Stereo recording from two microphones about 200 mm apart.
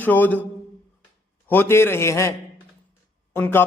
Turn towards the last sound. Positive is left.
turn(degrees=10)  # may be behind; listen again after turning